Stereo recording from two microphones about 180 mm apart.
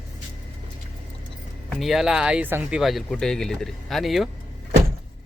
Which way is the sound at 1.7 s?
Centre (ahead or behind).